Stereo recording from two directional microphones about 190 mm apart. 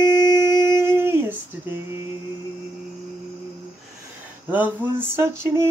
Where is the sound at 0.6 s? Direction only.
15° right (ahead or behind).